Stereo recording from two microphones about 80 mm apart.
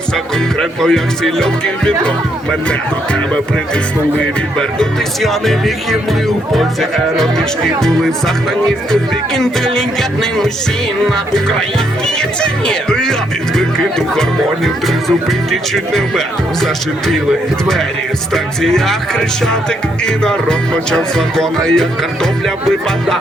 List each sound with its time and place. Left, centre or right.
0.6 s music: centre
4.5 s speech: centre
12.0 s music: centre
13.6 s speech: centre
18.6 s speech: centre
20.1 s music: centre